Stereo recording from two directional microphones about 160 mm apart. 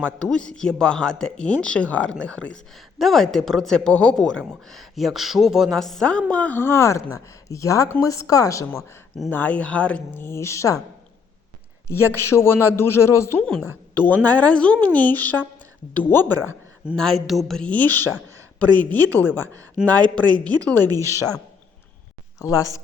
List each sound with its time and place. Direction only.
0.0 s a woman's voice: 5° left (ahead or behind)
11.9 s speech: 15° left (ahead or behind)
13.4 s a woman's voice: 5° left (ahead or behind)
16.9 s a woman's voice: centre (ahead or behind)
20.9 s a woman's voice: 20° right (ahead or behind)
22.4 s speech: 20° left (ahead or behind)